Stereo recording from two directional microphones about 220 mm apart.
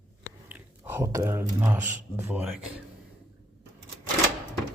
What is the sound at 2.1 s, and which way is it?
Speech, 10° right (ahead or behind).